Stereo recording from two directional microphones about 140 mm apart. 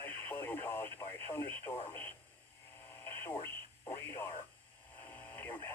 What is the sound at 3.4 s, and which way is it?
Radio, 15° left (ahead or behind).